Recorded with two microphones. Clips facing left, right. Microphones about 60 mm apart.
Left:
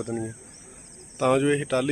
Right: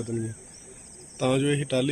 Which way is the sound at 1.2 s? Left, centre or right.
Left.